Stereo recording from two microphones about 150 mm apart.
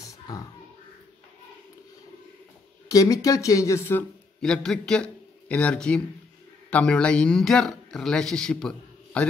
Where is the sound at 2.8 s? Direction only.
20° left (ahead or behind).